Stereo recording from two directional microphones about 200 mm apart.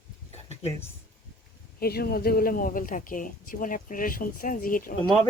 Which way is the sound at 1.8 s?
50° left (ahead or behind).